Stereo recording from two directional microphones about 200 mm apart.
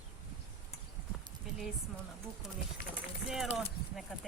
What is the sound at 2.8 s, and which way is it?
Speech, 50° left (ahead or behind).